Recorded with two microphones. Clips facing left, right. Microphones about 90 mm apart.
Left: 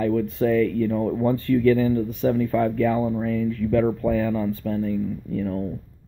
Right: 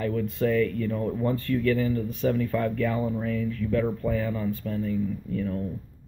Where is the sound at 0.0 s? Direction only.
30° left (ahead or behind).